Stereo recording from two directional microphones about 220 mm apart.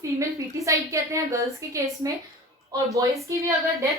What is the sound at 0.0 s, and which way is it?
A woman's voice, 15° right (ahead or behind).